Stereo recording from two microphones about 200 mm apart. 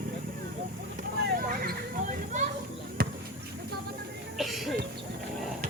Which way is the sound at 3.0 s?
50° right (ahead or behind).